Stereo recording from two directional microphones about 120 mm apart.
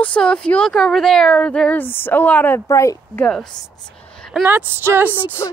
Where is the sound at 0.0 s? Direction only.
10° left (ahead or behind).